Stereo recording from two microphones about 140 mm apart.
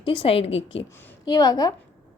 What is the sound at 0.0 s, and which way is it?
Speech, 35° left (ahead or behind).